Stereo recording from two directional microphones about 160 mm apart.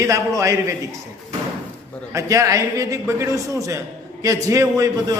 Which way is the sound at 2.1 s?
20° right (ahead or behind).